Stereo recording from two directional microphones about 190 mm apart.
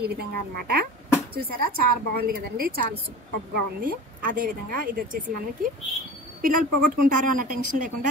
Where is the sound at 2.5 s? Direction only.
55° right (ahead or behind).